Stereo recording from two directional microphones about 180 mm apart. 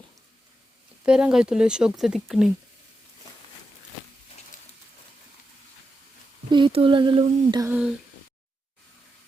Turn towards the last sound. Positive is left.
turn(degrees=-10)  # may be behind; listen again after turning